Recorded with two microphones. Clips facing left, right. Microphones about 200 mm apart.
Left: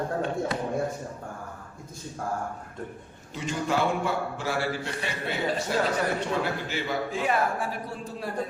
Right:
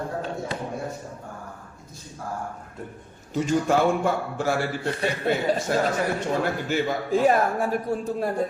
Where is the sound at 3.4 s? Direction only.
45° right (ahead or behind).